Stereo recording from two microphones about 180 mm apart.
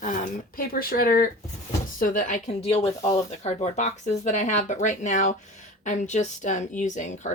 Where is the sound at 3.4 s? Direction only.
40° left (ahead or behind).